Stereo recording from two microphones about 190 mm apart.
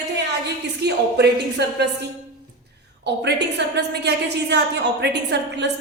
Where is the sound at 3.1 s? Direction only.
65° right (ahead or behind).